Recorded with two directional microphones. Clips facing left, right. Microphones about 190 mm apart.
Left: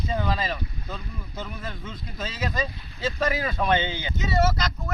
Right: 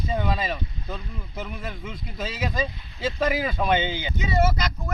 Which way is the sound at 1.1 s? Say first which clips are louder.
Right 1 dB; 20° right (ahead or behind).